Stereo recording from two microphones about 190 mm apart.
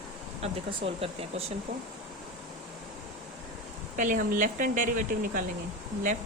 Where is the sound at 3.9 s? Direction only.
45° right (ahead or behind).